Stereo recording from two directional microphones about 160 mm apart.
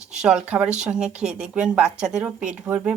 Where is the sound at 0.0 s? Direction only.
5° right (ahead or behind).